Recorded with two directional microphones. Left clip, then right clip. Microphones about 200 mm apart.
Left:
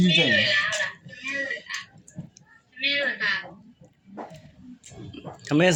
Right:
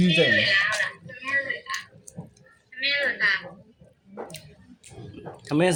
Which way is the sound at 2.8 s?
20° right (ahead or behind).